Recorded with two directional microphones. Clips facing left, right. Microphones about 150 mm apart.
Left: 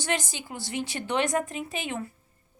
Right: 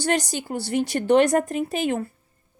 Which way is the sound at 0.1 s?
40° right (ahead or behind).